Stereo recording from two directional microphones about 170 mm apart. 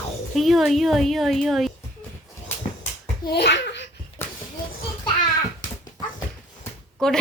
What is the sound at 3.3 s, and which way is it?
Speech, 85° left.